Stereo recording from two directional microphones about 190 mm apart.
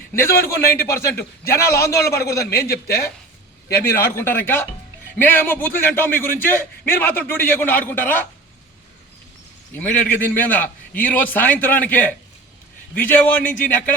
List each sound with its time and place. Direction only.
0.3 s a man's voice: 55° left (ahead or behind)
0.6 s a man's voice: 15° left (ahead or behind)
9.7 s a man's voice: 10° left (ahead or behind)